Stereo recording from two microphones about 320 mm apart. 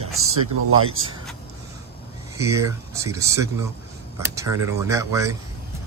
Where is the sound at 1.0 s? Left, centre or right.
Right.